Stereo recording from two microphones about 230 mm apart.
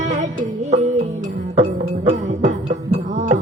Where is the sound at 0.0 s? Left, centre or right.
Right.